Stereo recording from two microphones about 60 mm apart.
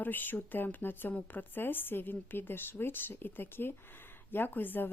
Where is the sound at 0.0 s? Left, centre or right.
Left.